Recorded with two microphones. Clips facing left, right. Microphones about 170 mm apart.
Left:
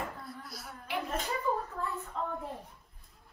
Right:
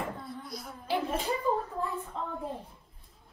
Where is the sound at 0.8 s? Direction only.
30° right (ahead or behind).